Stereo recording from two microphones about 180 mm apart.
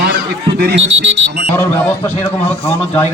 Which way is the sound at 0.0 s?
70° right (ahead or behind).